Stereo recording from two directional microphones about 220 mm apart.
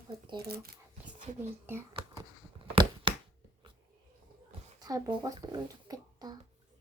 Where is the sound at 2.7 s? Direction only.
20° right (ahead or behind).